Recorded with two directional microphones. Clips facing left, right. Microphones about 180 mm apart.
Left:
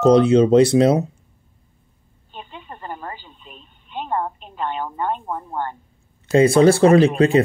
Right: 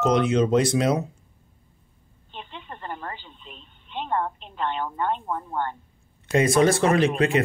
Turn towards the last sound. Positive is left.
turn(degrees=30)  # may be behind; listen again after turning